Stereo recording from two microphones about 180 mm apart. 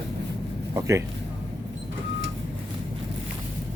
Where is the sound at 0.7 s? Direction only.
15° right (ahead or behind).